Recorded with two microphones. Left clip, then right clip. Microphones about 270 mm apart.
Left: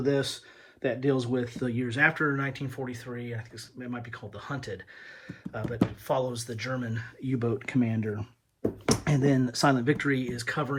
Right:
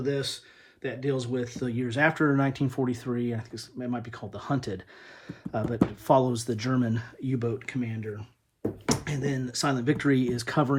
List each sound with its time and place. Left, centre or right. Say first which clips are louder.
0.0 s speech: left 2 dB; centre